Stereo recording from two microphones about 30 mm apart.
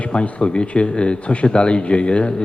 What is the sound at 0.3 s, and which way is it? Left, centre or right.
A man's voice, left.